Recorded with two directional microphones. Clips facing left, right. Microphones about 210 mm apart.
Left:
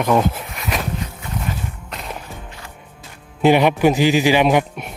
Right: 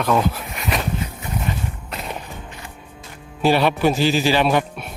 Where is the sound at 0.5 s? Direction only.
Centre (ahead or behind).